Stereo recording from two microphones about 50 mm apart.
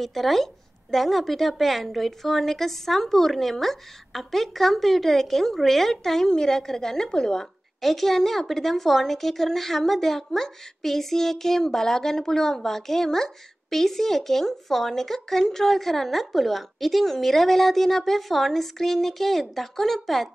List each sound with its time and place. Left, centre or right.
0.0 s a woman's voice: centre